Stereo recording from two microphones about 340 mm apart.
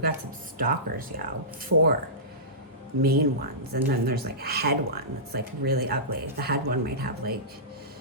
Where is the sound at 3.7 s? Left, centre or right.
Right.